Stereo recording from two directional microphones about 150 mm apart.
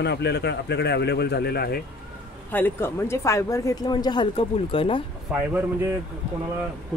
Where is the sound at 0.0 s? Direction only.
90° left.